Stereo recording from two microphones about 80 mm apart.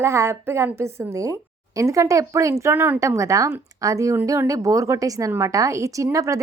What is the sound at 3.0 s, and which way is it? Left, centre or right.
A woman's voice, right.